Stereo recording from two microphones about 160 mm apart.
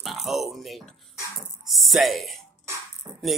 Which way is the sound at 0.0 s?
Centre (ahead or behind).